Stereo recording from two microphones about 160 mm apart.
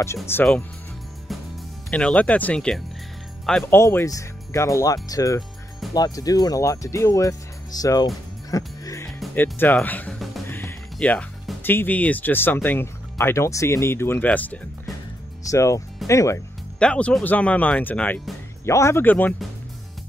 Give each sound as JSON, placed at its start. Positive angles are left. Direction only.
{"t": 0.0, "sound": "speech", "side_deg": 15}
{"t": 1.9, "sound": "speech", "side_deg": 5}
{"t": 3.7, "sound": "speech", "side_deg": 15}
{"t": 8.5, "sound": "music", "side_deg": 20}
{"t": 9.0, "sound": "music", "side_deg": 10}
{"t": 10.5, "sound": "speech", "side_deg": 10}
{"t": 16.8, "sound": "speech", "side_deg": 5}